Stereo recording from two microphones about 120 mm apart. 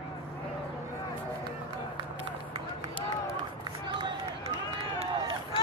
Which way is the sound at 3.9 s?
40° right (ahead or behind).